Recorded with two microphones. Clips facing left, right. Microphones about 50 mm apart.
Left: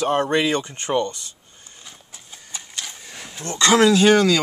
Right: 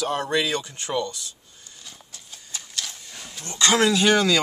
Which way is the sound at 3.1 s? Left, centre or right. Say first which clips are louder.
Left 4 dB; left.